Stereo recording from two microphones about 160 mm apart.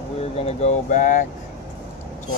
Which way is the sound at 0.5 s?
45° left (ahead or behind).